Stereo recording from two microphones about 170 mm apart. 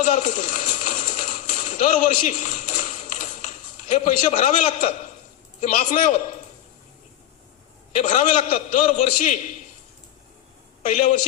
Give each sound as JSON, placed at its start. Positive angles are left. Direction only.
{"t": 0.0, "sound": "a sound", "side_deg": 45}
{"t": 3.9, "sound": "a man's voice", "side_deg": 45}
{"t": 7.9, "sound": "a man's voice", "side_deg": 45}
{"t": 10.8, "sound": "a man's voice", "side_deg": 45}